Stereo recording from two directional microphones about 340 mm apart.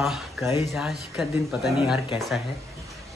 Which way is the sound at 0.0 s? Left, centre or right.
Centre.